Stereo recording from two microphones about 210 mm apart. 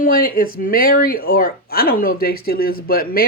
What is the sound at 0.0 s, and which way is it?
Speech, 45° left (ahead or behind).